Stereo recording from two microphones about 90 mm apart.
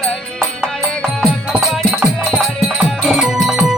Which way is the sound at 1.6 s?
5° right (ahead or behind).